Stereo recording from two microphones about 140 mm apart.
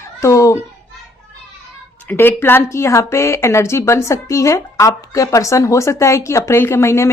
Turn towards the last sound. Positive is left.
turn(degrees=20)  # may be behind; listen again after turning